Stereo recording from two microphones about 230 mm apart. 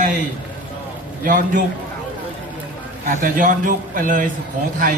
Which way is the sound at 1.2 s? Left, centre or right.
Right.